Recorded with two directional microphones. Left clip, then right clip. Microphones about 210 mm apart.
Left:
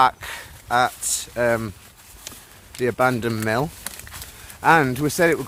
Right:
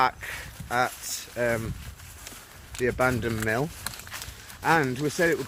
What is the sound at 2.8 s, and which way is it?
Speech, 25° left (ahead or behind).